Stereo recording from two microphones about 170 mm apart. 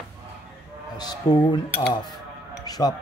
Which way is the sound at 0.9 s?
25° left (ahead or behind).